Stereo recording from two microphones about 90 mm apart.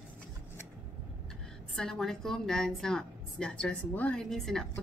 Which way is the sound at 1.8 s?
5° left (ahead or behind).